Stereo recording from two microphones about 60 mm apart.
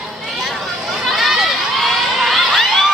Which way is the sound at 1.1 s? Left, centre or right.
Centre.